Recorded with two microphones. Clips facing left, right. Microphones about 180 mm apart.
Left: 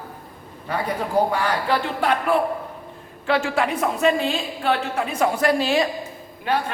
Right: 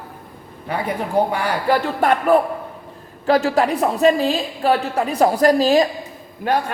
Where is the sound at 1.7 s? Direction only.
45° right (ahead or behind).